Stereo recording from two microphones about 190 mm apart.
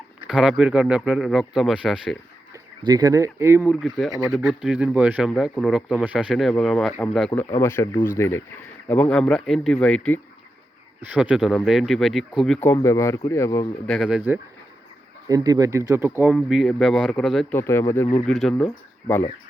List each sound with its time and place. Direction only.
0.2 s speech: 5° right (ahead or behind)
2.8 s speech: 20° right (ahead or behind)
3.7 s speech: centre (ahead or behind)
7.3 s speech: 15° left (ahead or behind)
11.0 s speech: 5° right (ahead or behind)
12.6 s speech: 15° left (ahead or behind)
13.8 s speech: centre (ahead or behind)
15.3 s speech: 15° right (ahead or behind)
16.2 s speech: 5° right (ahead or behind)
17.6 s speech: 15° left (ahead or behind)
18.3 s speech: centre (ahead or behind)